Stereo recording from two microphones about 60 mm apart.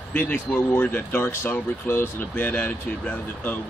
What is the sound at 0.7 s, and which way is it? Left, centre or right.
Speech, left.